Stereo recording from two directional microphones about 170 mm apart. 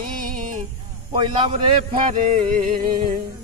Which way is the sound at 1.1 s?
30° right (ahead or behind).